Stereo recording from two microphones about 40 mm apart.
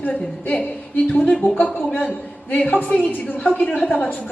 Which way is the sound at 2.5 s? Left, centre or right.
Left.